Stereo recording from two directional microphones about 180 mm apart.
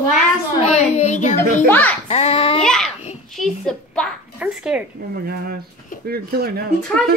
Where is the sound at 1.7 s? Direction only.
10° left (ahead or behind).